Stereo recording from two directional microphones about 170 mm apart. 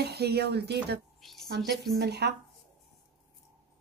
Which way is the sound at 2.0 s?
80° right.